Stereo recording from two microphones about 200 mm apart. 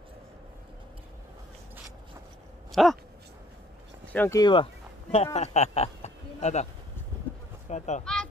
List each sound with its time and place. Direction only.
2.7 s speech: centre (ahead or behind)
4.0 s speech: 10° left (ahead or behind)
4.4 s speech: 25° left (ahead or behind)
7.7 s speech: 35° left (ahead or behind)
8.0 s a sound: 5° left (ahead or behind)